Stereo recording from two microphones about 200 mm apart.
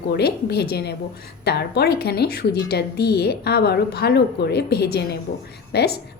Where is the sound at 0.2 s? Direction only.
55° left (ahead or behind).